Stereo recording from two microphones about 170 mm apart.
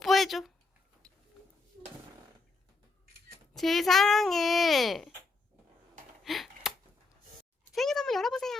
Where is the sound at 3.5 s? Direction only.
Centre (ahead or behind).